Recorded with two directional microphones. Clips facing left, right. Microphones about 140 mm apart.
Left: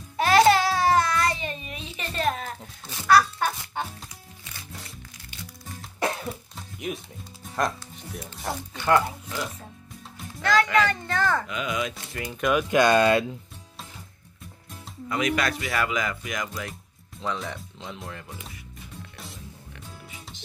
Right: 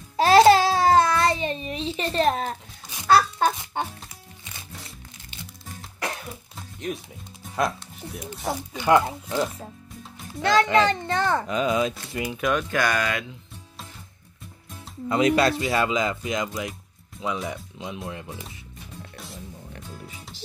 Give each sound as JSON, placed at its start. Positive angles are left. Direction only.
{"t": 0.2, "sound": "babbling", "side_deg": -30}
{"t": 3.1, "sound": "a sound", "side_deg": -30}
{"t": 6.9, "sound": "speech", "side_deg": 5}
{"t": 8.7, "sound": "speech", "side_deg": -15}
{"t": 11.4, "sound": "speech", "side_deg": -35}
{"t": 12.4, "sound": "speech", "side_deg": 0}
{"t": 12.6, "sound": "speech", "side_deg": 20}
{"t": 15.0, "sound": "speech", "side_deg": -30}
{"t": 17.2, "sound": "speech", "side_deg": -10}
{"t": 19.1, "sound": "music", "side_deg": 0}